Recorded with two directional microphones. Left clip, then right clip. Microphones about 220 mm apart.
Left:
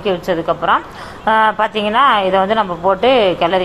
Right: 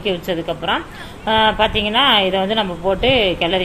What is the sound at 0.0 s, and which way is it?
Speech, 5° right (ahead or behind).